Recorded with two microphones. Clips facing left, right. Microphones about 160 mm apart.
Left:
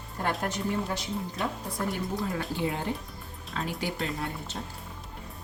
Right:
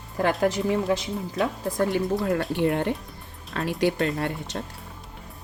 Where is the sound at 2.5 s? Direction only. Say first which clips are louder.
Right 7 dB; 65° right (ahead or behind).